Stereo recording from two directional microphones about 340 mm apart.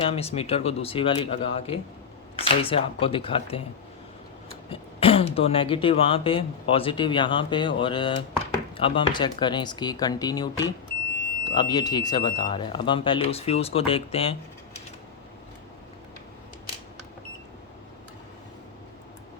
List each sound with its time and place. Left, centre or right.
0.0 s speech: centre
4.7 s speech: centre